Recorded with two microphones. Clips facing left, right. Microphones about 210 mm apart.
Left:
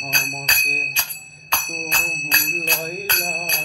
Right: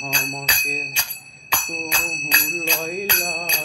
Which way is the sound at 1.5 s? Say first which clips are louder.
Right 1 dB; 10° right (ahead or behind).